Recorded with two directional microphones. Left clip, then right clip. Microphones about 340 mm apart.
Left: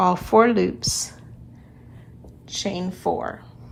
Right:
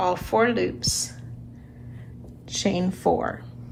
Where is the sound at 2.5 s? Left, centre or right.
Centre.